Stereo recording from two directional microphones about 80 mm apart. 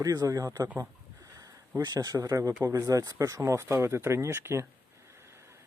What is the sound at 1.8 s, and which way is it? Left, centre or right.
Speech, right.